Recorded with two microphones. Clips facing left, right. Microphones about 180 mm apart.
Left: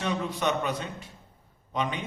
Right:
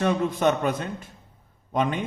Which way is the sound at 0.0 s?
50° right (ahead or behind).